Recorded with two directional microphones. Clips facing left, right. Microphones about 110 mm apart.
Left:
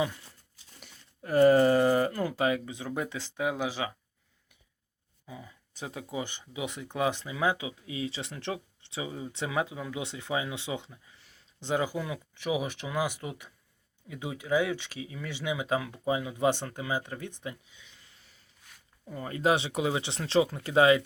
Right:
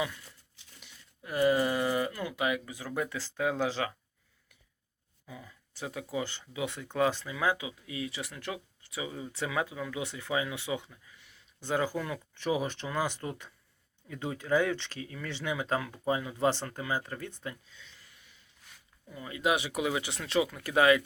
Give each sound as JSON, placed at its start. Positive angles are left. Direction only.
{"t": 0.0, "sound": "a sound", "side_deg": 30}
{"t": 0.5, "sound": "speech", "side_deg": 45}
{"t": 5.3, "sound": "speech", "side_deg": 20}
{"t": 11.6, "sound": "speech", "side_deg": 20}
{"t": 19.0, "sound": "speech", "side_deg": 40}